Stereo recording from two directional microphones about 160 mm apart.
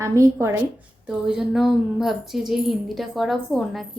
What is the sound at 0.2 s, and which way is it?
Speech, 15° right (ahead or behind).